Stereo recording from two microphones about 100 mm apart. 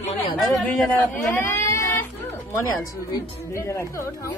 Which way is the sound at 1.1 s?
20° left (ahead or behind).